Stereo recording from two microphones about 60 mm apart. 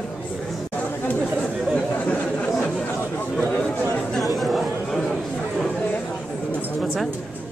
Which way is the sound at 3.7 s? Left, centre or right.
Left.